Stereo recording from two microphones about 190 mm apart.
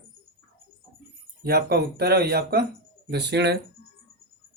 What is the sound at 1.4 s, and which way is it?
Speech, 55° right (ahead or behind).